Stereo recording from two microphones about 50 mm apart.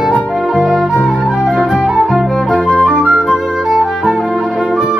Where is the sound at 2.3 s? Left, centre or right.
Centre.